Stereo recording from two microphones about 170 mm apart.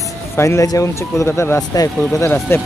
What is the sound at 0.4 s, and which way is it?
Speech, 15° left (ahead or behind).